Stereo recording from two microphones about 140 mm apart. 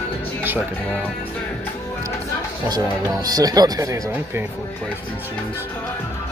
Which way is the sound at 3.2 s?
25° right (ahead or behind).